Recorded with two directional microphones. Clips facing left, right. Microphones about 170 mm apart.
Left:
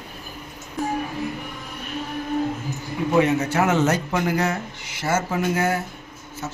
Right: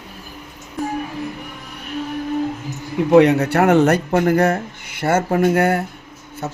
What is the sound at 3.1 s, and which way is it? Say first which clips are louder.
Speech: right 7 dB; 70° right (ahead or behind).